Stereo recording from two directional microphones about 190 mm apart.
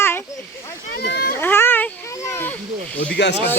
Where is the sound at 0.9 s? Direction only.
55° left (ahead or behind).